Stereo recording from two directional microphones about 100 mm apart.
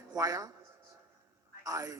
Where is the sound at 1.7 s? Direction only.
30° right (ahead or behind).